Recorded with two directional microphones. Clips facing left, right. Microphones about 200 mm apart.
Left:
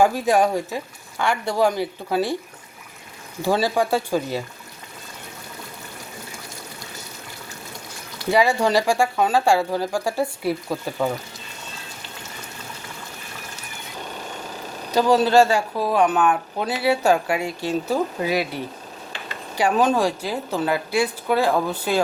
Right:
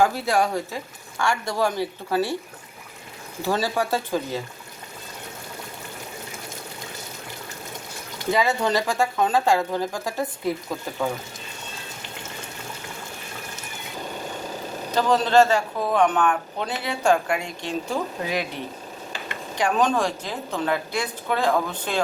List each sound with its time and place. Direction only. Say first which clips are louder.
0.0 s speech: left 3 dB; 15° left (ahead or behind)
3.4 s speech: left 4 dB; 15° left (ahead or behind)
8.3 s speech: left 3 dB; 10° left (ahead or behind)
14.9 s speech: left 2 dB; 10° left (ahead or behind)